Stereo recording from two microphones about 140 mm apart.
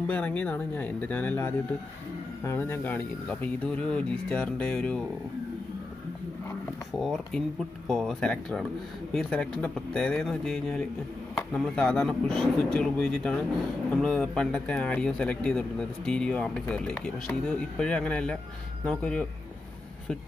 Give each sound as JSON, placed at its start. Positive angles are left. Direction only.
{"t": 0.0, "sound": "a man's voice", "side_deg": 10}
{"t": 7.0, "sound": "a man's voice", "side_deg": 5}